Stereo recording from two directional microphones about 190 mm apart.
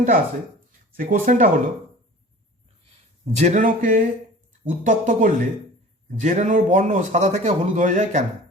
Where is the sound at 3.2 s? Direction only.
35° right (ahead or behind).